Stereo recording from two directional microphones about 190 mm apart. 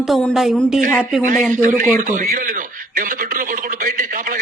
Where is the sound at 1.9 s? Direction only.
45° right (ahead or behind).